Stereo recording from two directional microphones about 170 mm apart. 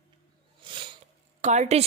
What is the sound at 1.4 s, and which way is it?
Speech, 40° right (ahead or behind).